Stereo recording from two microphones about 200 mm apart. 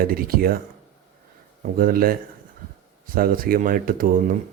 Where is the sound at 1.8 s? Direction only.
45° right (ahead or behind).